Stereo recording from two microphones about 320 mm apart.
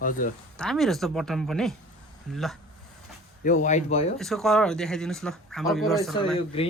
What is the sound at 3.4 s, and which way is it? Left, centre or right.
Speech, left.